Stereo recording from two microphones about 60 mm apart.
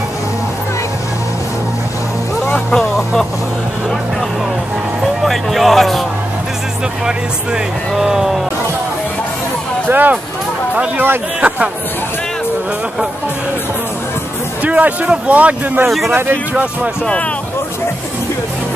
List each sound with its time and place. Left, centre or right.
2.7 s vehicle: centre
5.0 s music: centre
7.9 s speech: centre
9.8 s speech: right
14.6 s speech: right
16.1 s speech: right